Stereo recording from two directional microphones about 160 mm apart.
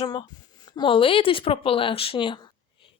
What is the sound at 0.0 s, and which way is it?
A woman's voice, 30° left (ahead or behind).